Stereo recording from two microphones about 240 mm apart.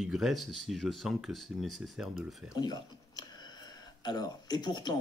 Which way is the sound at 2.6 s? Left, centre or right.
Centre.